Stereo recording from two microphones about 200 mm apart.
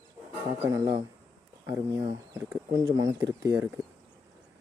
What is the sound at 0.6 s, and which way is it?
Speech, 20° right (ahead or behind).